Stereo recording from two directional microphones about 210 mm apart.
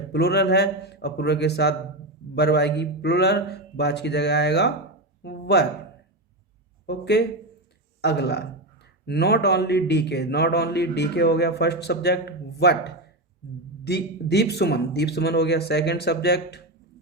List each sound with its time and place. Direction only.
0.1 s a man's voice: 50° left (ahead or behind)
5.2 s a sound: 50° left (ahead or behind)
6.8 s a man's voice: 55° left (ahead or behind)